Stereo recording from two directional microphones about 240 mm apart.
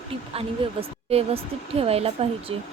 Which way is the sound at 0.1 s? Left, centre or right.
Right.